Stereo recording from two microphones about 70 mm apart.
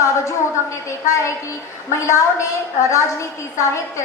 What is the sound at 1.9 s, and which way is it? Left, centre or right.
Speech, left.